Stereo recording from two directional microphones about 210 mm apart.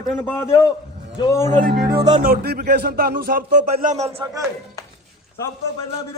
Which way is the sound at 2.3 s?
50° right (ahead or behind).